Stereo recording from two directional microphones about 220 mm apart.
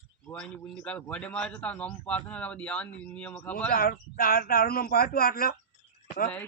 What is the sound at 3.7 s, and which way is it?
Speech, 40° left (ahead or behind).